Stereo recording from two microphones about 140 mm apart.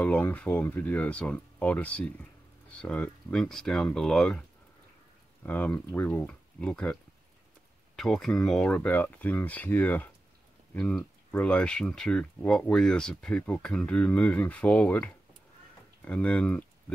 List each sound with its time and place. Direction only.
0.0 s speech: 10° left (ahead or behind)